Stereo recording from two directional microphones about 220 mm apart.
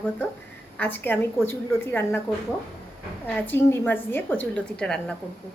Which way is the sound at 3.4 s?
10° left (ahead or behind).